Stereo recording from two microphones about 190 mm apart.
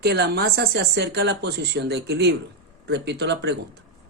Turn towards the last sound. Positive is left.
turn(degrees=-65)  # may be behind; listen again after turning